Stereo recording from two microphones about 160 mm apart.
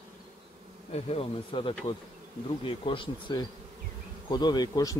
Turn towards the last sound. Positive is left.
turn(degrees=20)  # may be behind; listen again after turning